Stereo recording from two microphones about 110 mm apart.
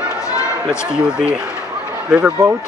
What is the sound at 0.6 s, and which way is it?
Speech, 5° right (ahead or behind).